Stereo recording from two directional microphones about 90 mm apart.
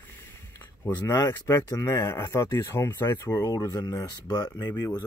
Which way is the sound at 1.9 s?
25° left (ahead or behind).